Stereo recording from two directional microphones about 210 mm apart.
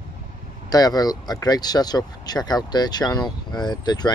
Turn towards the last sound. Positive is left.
turn(degrees=20)  # may be behind; listen again after turning